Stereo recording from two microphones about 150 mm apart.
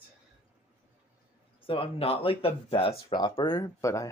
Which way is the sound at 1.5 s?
35° left (ahead or behind).